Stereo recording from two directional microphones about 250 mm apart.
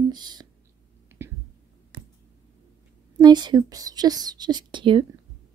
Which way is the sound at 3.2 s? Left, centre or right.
Centre.